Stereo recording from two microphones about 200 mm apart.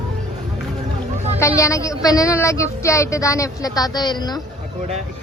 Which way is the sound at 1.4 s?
15° left (ahead or behind).